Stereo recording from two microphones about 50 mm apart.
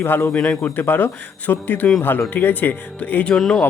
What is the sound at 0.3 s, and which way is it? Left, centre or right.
Speech, centre.